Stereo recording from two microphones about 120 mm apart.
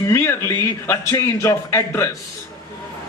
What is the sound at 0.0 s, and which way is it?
A man's voice, 20° left (ahead or behind).